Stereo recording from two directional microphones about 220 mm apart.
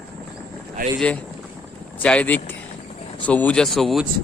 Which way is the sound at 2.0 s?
5° left (ahead or behind).